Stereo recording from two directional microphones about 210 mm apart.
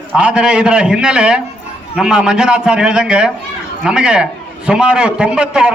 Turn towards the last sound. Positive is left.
turn(degrees=-5)  # may be behind; listen again after turning